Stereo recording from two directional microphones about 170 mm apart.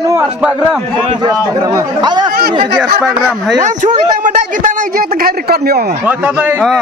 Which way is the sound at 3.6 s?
45° right (ahead or behind).